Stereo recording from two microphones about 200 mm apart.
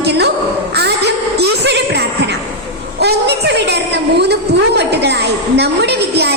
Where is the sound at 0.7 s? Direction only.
55° right (ahead or behind).